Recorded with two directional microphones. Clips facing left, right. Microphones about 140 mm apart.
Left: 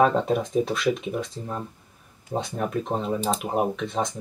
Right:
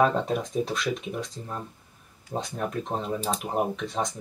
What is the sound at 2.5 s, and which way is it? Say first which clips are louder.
Speech: left 3 dB; centre (ahead or behind).